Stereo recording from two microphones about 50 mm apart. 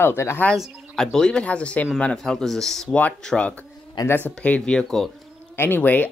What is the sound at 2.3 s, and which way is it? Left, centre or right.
Speech, centre.